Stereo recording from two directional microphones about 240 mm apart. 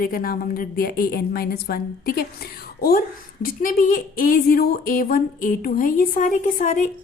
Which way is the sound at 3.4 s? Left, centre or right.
Left.